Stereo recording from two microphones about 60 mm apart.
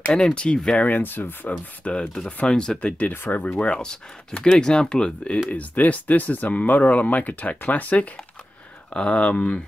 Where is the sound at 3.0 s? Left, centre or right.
Left.